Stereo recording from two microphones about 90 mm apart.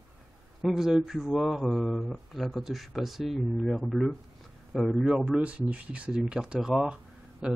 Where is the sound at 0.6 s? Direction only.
5° right (ahead or behind).